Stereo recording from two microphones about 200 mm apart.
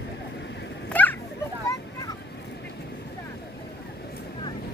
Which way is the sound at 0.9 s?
10° left (ahead or behind).